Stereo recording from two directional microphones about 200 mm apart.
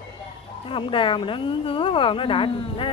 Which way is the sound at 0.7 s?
25° left (ahead or behind).